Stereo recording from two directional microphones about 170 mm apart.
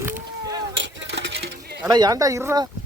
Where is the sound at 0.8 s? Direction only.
90° right; by 1.8 s 75° right (ahead or behind).